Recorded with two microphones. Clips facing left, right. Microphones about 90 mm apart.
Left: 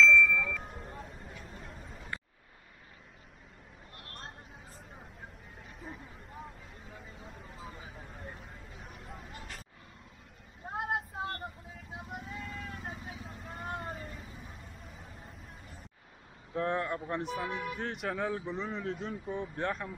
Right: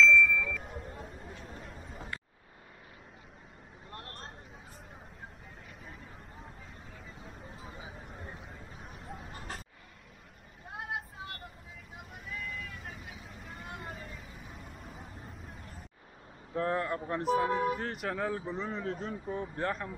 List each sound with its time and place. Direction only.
0.0 s ding: centre (ahead or behind)
3.9 s vehicle: 35° right (ahead or behind)
7.6 s vehicle: 5° right (ahead or behind)
10.7 s child singing: 40° left (ahead or behind)
12.3 s vehicle: 30° left (ahead or behind)
16.5 s speech: centre (ahead or behind)
17.5 s speech: 35° right (ahead or behind)
17.7 s speech: centre (ahead or behind)